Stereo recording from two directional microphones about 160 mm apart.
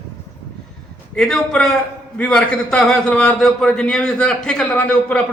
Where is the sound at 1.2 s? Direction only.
5° left (ahead or behind).